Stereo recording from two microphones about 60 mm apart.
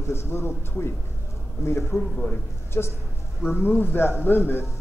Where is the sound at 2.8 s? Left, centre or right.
Left.